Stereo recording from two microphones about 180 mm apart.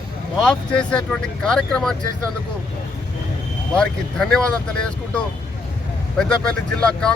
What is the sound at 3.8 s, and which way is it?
Speech, 5° left (ahead or behind).